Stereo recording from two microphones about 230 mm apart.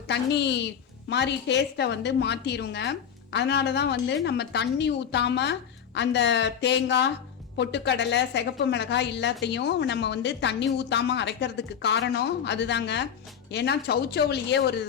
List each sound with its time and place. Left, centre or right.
0.1 s a woman's voice: left